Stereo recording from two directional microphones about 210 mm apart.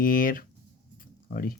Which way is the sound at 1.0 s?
45° left (ahead or behind).